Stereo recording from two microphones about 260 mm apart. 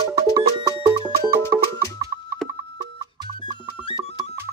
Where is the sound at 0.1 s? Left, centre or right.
Centre.